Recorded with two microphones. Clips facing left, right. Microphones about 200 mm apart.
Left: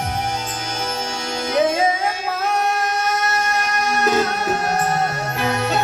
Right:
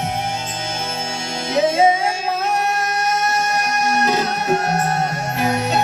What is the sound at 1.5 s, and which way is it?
Music, 25° right (ahead or behind).